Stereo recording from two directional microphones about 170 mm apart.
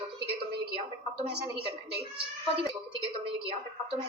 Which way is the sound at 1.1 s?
35° right (ahead or behind).